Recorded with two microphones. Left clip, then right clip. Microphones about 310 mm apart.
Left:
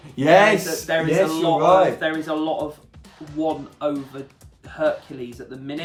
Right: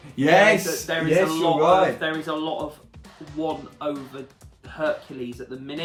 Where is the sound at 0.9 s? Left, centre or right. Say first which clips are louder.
Left 2 dB; centre.